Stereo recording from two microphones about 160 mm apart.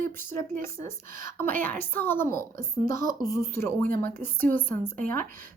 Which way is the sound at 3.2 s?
20° left (ahead or behind).